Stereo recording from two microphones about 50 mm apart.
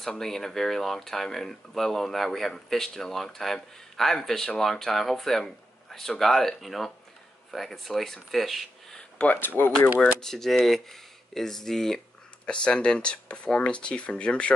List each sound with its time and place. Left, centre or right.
0.0 s speech: centre
9.2 s speech: left
9.8 s speech: left
10.2 s speech: centre
12.4 s speech: centre